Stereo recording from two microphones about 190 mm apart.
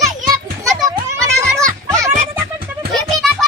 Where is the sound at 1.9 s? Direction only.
15° right (ahead or behind).